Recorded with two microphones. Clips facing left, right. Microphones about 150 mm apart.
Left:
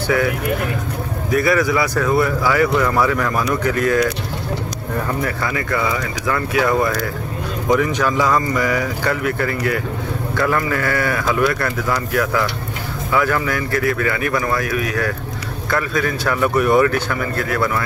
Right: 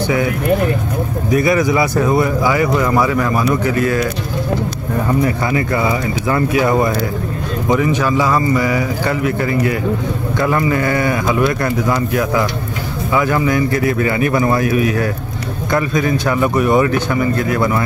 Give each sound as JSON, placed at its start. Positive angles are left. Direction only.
{"t": 1.3, "sound": "a man's voice", "side_deg": -20}
{"t": 5.2, "sound": "speech", "side_deg": -25}
{"t": 7.6, "sound": "speech", "side_deg": -10}